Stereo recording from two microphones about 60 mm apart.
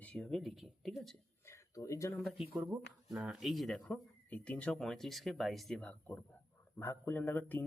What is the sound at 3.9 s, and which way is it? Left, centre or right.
Speech, left.